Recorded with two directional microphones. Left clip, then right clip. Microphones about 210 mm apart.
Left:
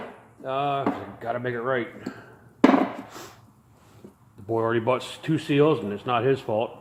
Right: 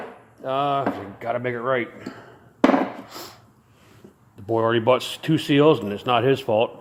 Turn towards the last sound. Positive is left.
turn(degrees=-40)  # may be behind; listen again after turning